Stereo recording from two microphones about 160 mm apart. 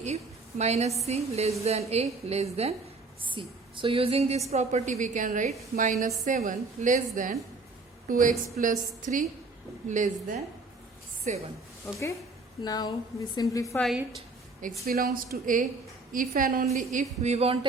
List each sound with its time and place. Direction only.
0.6 s a woman's voice: 40° right (ahead or behind)
12.6 s a woman's voice: 25° left (ahead or behind)
13.7 s a woman's voice: centre (ahead or behind)
14.6 s a woman's voice: 65° right (ahead or behind)
16.6 s a woman's voice: 50° right (ahead or behind)